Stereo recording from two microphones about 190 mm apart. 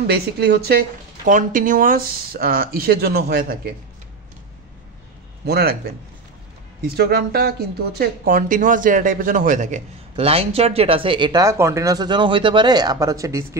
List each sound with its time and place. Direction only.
0.0 s speech: 60° right (ahead or behind)
1.2 s speech: 45° right (ahead or behind)
5.4 s speech: 55° right (ahead or behind)
7.0 s speech: 55° right (ahead or behind); by 13.6 s 15° right (ahead or behind)